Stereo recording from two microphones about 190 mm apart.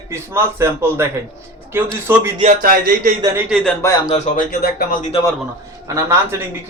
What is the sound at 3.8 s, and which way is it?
Speech, 15° left (ahead or behind).